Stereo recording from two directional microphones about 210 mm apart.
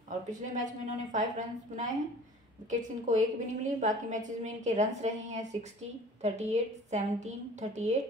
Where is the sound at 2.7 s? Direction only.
35° right (ahead or behind).